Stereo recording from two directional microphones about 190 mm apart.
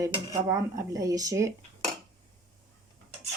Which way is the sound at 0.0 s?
15° right (ahead or behind).